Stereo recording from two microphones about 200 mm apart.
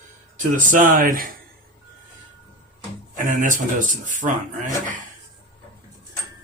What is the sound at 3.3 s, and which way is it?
Speech, 40° right (ahead or behind).